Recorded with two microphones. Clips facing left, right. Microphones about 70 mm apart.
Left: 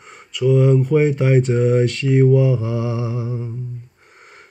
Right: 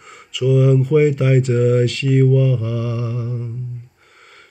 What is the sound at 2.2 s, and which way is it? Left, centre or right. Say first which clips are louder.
Mantra: left 1 dB; centre.